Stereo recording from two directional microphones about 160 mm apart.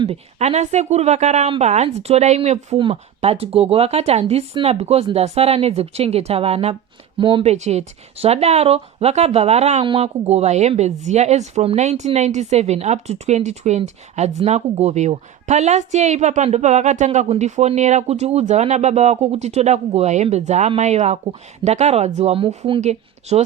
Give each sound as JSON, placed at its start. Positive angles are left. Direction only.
{"t": 0.1, "sound": "a woman's voice", "side_deg": -40}